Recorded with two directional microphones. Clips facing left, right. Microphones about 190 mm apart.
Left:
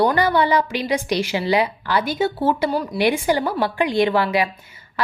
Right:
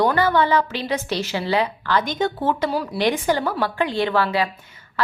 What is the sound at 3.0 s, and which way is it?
A woman's voice, 10° left (ahead or behind).